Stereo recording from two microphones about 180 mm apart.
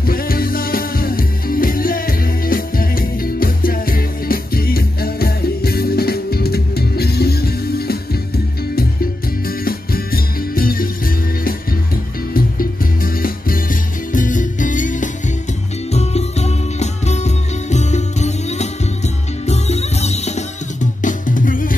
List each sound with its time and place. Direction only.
0.0 s music: 55° left (ahead or behind)
9.7 s music: 55° left (ahead or behind)
12.4 s music: 55° left (ahead or behind)